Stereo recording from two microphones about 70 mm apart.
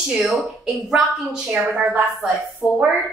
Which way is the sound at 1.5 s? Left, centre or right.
Right.